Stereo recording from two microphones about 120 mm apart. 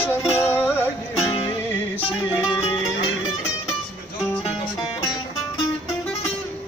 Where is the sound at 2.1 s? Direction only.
5° right (ahead or behind).